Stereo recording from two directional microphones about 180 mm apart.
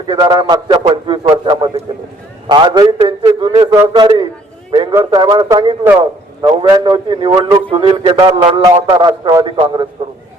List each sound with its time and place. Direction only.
0.1 s a man's voice: 25° right (ahead or behind)
3.0 s a sound: 25° right (ahead or behind)
3.8 s a man's voice: 25° right (ahead or behind)